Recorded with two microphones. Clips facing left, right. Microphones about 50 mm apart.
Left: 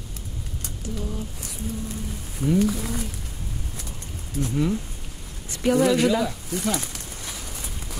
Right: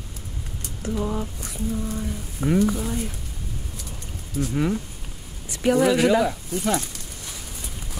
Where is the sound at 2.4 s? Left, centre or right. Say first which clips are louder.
Even; right.